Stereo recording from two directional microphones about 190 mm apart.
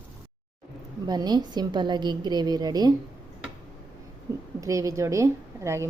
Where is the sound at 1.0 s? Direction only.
20° right (ahead or behind).